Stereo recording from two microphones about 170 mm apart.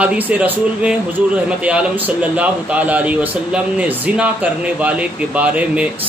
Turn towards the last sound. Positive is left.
turn(degrees=-10)  # may be behind; listen again after turning